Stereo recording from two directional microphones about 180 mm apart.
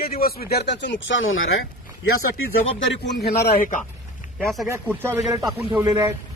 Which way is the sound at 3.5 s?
50° left (ahead or behind).